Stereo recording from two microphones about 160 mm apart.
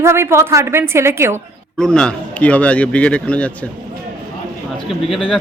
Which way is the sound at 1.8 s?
5° left (ahead or behind).